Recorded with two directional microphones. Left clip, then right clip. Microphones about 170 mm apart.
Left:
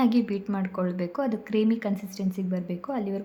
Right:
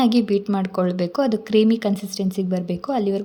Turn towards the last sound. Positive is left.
turn(degrees=-30)  # may be behind; listen again after turning